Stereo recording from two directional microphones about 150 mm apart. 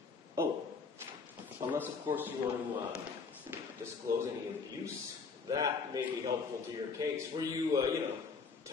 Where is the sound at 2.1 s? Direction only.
20° right (ahead or behind).